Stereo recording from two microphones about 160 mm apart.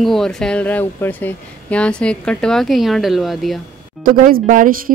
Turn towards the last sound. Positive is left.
turn(degrees=-60)  # may be behind; listen again after turning